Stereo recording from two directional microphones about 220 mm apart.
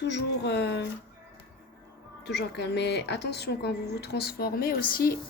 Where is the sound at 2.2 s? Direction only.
50° left (ahead or behind).